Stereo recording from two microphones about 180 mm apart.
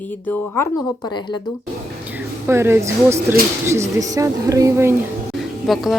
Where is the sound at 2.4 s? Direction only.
15° right (ahead or behind).